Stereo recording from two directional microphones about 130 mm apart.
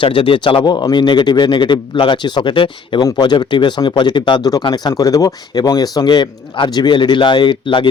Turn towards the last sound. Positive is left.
turn(degrees=40)  # may be behind; listen again after turning